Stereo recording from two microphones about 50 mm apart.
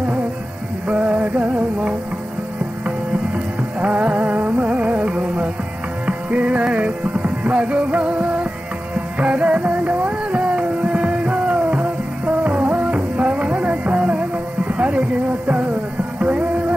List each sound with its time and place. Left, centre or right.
0.8 s music: right
3.8 s music: right